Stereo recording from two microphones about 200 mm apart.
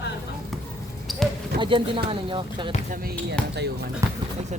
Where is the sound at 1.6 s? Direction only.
25° right (ahead or behind).